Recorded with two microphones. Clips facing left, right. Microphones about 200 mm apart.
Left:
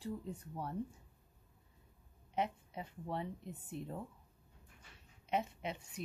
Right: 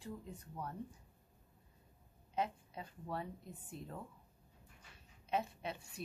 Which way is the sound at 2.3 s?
20° left (ahead or behind).